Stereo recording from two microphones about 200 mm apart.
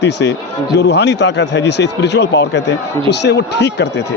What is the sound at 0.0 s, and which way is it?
Speech, 60° left (ahead or behind).